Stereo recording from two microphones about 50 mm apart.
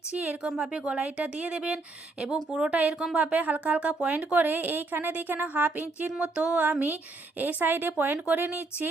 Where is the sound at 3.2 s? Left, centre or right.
Right.